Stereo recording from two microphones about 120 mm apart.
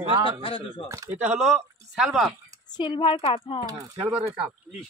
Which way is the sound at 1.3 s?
5° right (ahead or behind).